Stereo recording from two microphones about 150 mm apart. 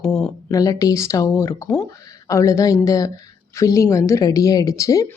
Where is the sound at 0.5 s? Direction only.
25° left (ahead or behind).